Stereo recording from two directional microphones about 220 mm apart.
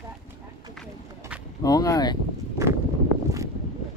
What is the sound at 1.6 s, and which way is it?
Speech, 15° left (ahead or behind).